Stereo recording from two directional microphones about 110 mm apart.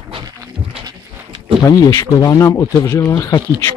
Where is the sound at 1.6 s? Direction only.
30° left (ahead or behind).